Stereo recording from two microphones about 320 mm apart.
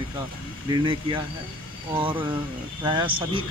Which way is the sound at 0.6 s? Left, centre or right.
Centre.